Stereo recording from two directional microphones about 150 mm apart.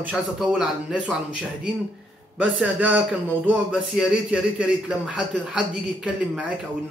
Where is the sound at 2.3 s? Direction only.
10° right (ahead or behind).